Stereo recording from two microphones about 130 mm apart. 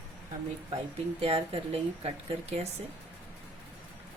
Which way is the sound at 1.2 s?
50° right (ahead or behind).